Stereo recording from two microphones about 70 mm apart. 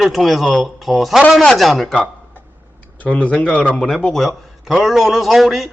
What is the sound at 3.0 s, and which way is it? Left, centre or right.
Speech, left.